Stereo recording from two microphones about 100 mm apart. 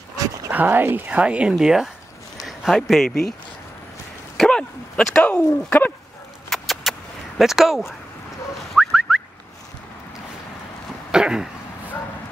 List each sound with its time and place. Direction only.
0.5 s speech: 20° right (ahead or behind); by 3.3 s centre (ahead or behind)
4.4 s dog: 10° left (ahead or behind)
5.7 s speech: 15° left (ahead or behind)
6.5 s keys jangling: centre (ahead or behind)
8.7 s a sound: 5° right (ahead or behind)
11.1 s throat clearing: 5° right (ahead or behind)